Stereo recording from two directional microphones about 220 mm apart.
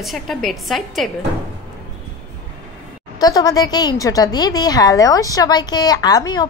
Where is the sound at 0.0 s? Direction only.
Centre (ahead or behind).